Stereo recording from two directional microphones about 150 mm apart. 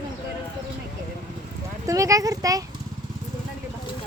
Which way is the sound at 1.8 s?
20° right (ahead or behind).